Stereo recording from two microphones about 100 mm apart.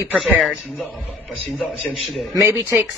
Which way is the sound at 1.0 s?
15° right (ahead or behind).